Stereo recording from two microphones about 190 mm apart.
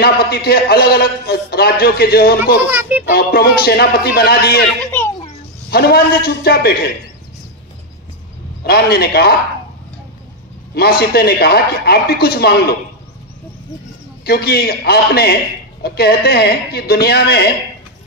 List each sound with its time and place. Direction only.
0.0 s a man's voice: 55° left (ahead or behind)
2.7 s a child's voice: 10° right (ahead or behind)
3.1 s a man's voice: 55° left (ahead or behind)
5.7 s a man's voice: 55° left (ahead or behind)
8.6 s a man's voice: 55° left (ahead or behind)
10.7 s a man's voice: 55° left (ahead or behind)
14.2 s a man's voice: 55° left (ahead or behind)